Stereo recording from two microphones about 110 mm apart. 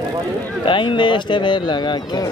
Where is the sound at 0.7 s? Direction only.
45° left (ahead or behind).